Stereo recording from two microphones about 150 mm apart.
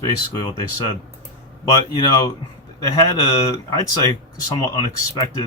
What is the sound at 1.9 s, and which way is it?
Speech, 30° left (ahead or behind).